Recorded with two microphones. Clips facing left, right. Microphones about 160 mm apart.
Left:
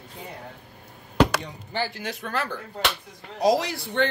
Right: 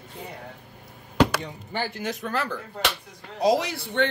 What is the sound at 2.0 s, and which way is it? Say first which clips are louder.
Speech: right 1 dB; 40° right (ahead or behind).